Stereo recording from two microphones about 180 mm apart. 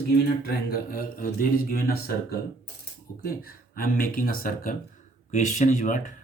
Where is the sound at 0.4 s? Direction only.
55° left (ahead or behind).